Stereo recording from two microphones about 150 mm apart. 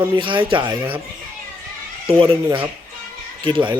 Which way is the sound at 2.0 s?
35° right (ahead or behind).